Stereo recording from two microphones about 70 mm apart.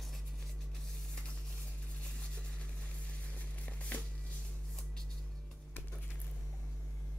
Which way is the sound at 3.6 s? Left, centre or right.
Left.